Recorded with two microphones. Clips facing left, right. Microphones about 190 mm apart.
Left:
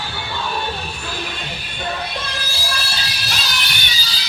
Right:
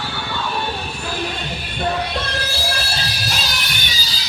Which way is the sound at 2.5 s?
60° right (ahead or behind).